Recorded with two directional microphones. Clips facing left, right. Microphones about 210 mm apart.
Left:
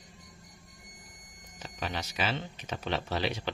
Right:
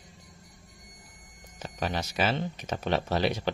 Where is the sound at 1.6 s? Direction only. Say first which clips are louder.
Right 5 dB; 45° right (ahead or behind).